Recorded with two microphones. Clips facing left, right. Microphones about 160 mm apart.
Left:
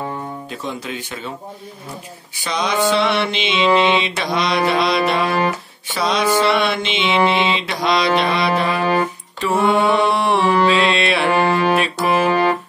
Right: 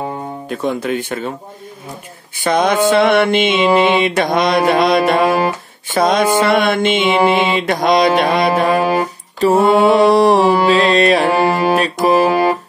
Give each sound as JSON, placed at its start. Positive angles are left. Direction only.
{"t": 0.5, "sound": "speech", "side_deg": -55}
{"t": 2.3, "sound": "mantra", "side_deg": -50}
{"t": 10.7, "sound": "music", "side_deg": -40}
{"t": 11.4, "sound": "music", "side_deg": -10}
{"t": 11.7, "sound": "music", "side_deg": -40}
{"t": 12.3, "sound": "keyboard", "side_deg": -10}